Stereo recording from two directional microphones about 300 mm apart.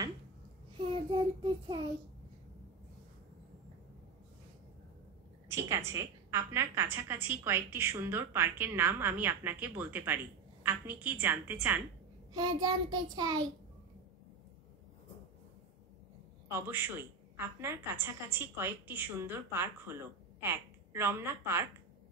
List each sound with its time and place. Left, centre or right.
0.8 s child singing: centre
5.5 s a woman's voice: centre
16.4 s a woman's voice: centre